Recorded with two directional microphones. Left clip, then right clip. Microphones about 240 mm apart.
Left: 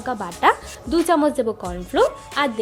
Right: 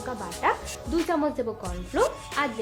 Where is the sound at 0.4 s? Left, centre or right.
Left.